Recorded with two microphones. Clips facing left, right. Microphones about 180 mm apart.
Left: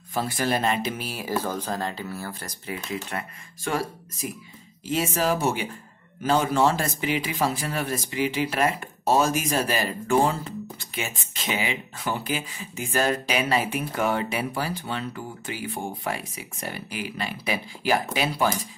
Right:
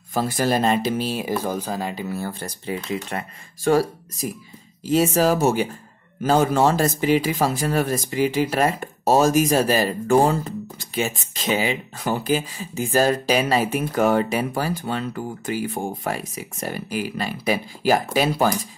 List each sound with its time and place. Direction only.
0.1 s speech: 40° right (ahead or behind)